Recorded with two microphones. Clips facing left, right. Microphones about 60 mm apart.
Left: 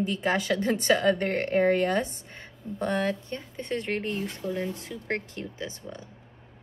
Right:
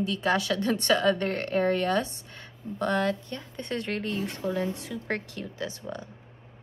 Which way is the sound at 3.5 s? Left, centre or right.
Centre.